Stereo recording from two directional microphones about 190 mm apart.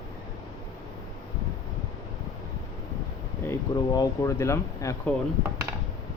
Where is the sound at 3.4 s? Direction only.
15° left (ahead or behind).